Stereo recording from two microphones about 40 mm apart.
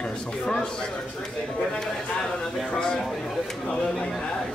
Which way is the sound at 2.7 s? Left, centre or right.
Centre.